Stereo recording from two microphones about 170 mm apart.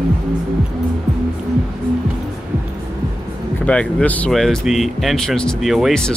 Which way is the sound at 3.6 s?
5° left (ahead or behind).